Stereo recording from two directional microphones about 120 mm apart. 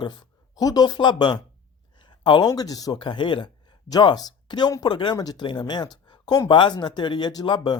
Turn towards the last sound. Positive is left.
turn(degrees=35)  # may be behind; listen again after turning